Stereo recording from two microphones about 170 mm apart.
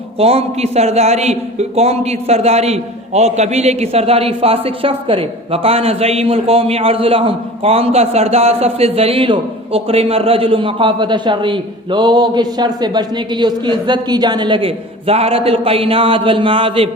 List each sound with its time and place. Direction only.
0.2 s a man's voice: 35° right (ahead or behind)